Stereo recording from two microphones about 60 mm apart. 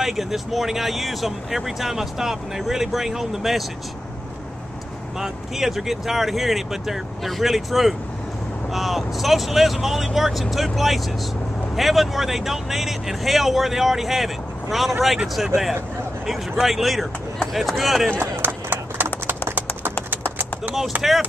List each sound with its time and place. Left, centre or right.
0.0 s speech: centre
5.2 s speech: centre
18.4 s a sound: right
20.9 s speech: right